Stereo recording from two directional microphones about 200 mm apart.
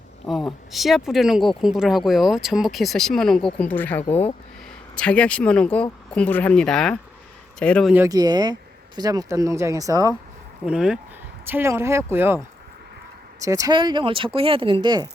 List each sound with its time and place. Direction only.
0.3 s speech: centre (ahead or behind)
7.9 s speech: 15° right (ahead or behind)
10.7 s speech: 5° right (ahead or behind); by 15.0 s 20° right (ahead or behind)